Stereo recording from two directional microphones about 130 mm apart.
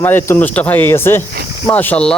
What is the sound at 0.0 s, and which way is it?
Speech, 15° left (ahead or behind).